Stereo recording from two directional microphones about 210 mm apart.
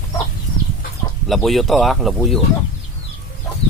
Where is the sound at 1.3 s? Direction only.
Centre (ahead or behind).